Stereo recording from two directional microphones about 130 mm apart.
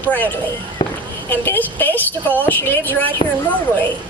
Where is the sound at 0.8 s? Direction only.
35° left (ahead or behind).